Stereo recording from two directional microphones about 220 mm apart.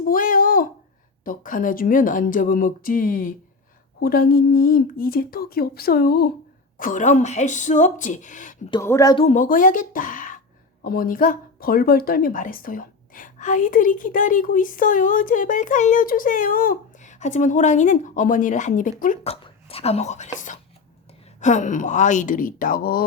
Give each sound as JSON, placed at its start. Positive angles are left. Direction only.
{"t": 0.0, "sound": "a sound", "side_deg": 40}
{"t": 1.2, "sound": "a woman's voice", "side_deg": 40}
{"t": 8.7, "sound": "speech", "side_deg": 15}
{"t": 9.2, "sound": "a woman's voice", "side_deg": 35}
{"t": 21.4, "sound": "speech", "side_deg": 35}